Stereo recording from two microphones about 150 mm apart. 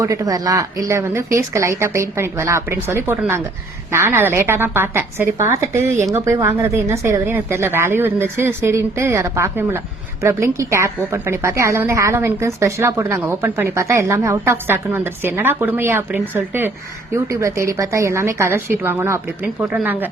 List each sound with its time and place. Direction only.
0.0 s a woman's voice: 20° right (ahead or behind)